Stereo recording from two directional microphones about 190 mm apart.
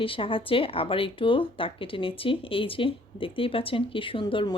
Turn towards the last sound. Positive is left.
turn(degrees=25)  # may be behind; listen again after turning